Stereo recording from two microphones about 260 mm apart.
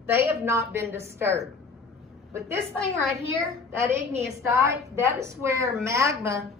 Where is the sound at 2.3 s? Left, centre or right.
Centre.